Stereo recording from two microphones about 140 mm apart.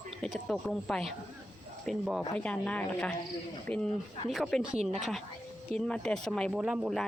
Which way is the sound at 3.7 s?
50° right (ahead or behind).